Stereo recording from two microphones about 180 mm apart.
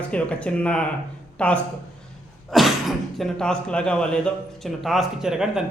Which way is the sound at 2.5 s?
Centre (ahead or behind).